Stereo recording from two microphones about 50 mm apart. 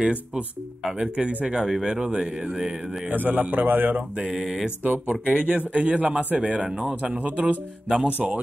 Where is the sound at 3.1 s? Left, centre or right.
Right.